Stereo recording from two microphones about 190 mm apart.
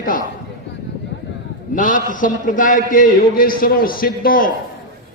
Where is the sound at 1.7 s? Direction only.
45° left (ahead or behind).